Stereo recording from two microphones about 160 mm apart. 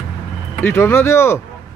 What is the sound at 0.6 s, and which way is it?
Speech, 15° left (ahead or behind).